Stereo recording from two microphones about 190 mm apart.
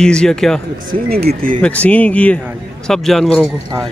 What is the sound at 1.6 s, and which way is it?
Speech, 5° left (ahead or behind).